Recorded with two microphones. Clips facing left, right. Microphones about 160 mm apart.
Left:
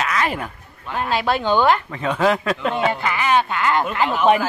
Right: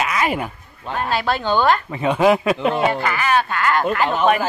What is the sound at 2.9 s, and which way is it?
Speech, 20° left (ahead or behind).